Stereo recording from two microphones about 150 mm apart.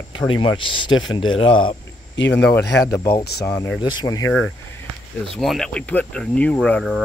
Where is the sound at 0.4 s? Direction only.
35° left (ahead or behind).